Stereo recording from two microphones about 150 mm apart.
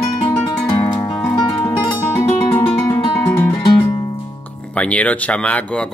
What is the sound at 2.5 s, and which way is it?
Guitar, 10° left (ahead or behind).